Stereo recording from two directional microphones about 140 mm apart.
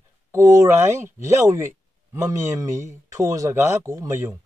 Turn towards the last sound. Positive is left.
turn(degrees=-20)  # may be behind; listen again after turning